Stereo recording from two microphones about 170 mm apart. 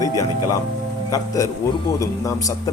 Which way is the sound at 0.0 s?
20° left (ahead or behind).